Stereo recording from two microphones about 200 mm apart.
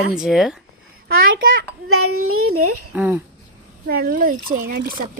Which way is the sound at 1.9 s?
90° right.